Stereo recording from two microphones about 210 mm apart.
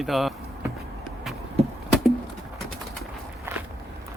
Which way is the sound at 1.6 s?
30° right (ahead or behind).